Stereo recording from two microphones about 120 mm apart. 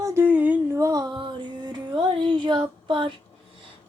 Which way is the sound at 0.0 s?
20° right (ahead or behind).